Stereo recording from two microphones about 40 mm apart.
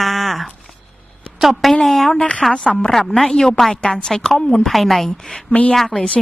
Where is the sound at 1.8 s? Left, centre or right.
Centre.